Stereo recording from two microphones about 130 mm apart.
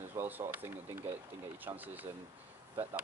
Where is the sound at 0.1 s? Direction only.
15° right (ahead or behind).